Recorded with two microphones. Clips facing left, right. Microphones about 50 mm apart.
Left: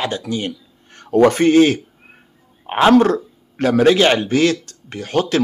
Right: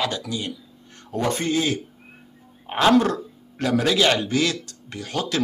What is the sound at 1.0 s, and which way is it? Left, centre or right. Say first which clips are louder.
Speech: left 12 dB; left.